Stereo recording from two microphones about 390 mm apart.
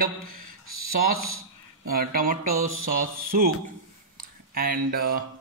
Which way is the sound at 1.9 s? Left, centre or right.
Right.